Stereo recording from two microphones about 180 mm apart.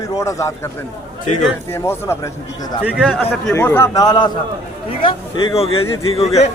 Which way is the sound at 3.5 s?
15° left (ahead or behind).